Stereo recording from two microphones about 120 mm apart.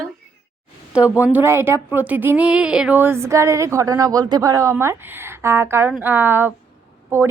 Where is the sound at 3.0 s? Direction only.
20° right (ahead or behind).